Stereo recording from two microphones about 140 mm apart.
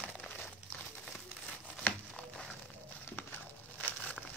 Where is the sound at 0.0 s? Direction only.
5° left (ahead or behind).